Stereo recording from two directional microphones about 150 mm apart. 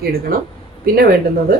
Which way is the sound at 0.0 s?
80° right.